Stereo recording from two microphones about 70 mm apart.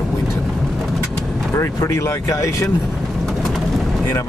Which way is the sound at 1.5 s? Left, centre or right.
Left.